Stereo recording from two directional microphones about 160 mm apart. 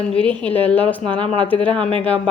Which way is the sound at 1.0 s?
30° right (ahead or behind).